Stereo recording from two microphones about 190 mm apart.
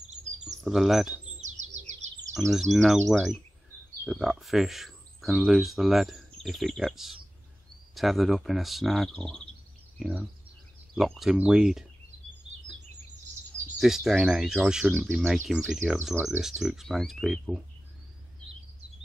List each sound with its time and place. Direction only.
0.7 s speech: centre (ahead or behind)
1.4 s bird: 40° right (ahead or behind)
2.5 s speech: centre (ahead or behind)
13.7 s speech: centre (ahead or behind)